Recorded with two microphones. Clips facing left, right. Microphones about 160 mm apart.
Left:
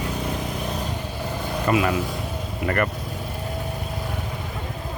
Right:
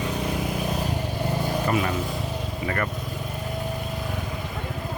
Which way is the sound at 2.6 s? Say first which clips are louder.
Left 5 dB; 60° left (ahead or behind).